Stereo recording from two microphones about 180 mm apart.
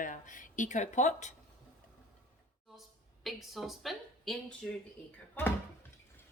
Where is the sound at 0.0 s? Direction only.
45° left (ahead or behind).